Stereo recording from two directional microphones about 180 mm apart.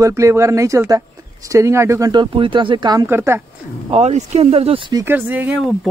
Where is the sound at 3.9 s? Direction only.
35° right (ahead or behind).